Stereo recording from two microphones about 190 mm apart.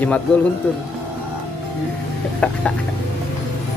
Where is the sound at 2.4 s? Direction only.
5° left (ahead or behind).